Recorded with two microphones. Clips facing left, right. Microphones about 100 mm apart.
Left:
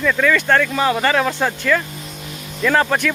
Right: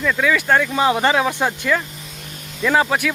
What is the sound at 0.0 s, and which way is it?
Speech, 10° right (ahead or behind).